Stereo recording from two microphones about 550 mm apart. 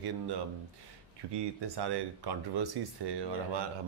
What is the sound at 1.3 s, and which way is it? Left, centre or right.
Speech, right.